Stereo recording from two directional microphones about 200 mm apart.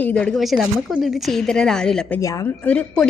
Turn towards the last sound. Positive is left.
turn(degrees=5)  # may be behind; listen again after turning